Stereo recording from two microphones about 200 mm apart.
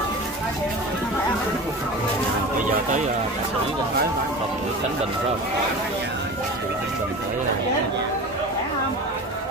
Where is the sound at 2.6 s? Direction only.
40° right (ahead or behind).